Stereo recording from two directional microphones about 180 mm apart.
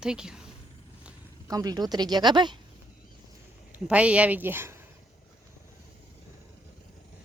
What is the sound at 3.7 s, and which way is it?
A woman's voice, 5° right (ahead or behind).